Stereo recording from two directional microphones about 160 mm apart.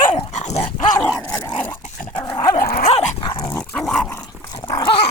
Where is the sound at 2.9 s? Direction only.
40° left (ahead or behind).